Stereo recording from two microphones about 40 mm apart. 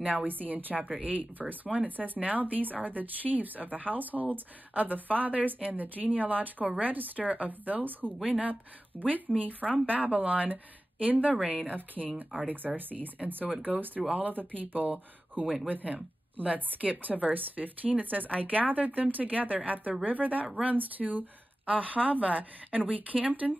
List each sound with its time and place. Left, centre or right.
0.0 s a woman's voice: right
8.9 s speech: left
9.4 s a woman's voice: right